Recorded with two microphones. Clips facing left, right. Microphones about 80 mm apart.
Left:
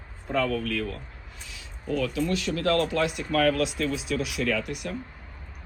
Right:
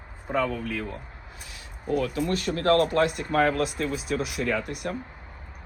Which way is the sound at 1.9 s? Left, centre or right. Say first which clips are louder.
Right 1 dB; right.